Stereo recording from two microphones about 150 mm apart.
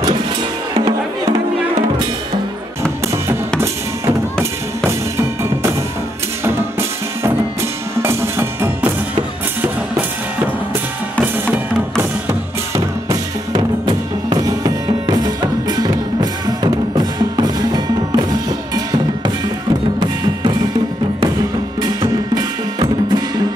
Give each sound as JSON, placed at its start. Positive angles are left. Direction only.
{"t": 3.6, "sound": "music", "side_deg": -20}
{"t": 11.1, "sound": "music", "side_deg": -10}
{"t": 12.3, "sound": "music", "side_deg": -25}
{"t": 21.8, "sound": "music", "side_deg": -30}